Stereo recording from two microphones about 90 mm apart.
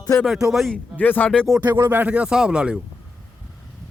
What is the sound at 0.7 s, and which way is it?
Speech, 20° left (ahead or behind).